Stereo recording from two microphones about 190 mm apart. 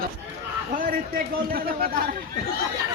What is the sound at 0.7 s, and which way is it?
A man's voice, 45° right (ahead or behind).